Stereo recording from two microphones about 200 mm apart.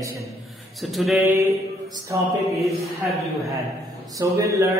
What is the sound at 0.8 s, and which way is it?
Speech, centre (ahead or behind).